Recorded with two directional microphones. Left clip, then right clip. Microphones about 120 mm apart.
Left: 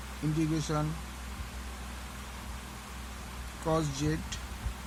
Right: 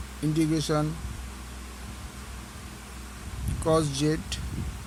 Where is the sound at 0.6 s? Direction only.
85° right.